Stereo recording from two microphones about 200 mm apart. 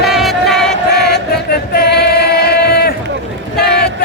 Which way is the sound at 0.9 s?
55° left (ahead or behind).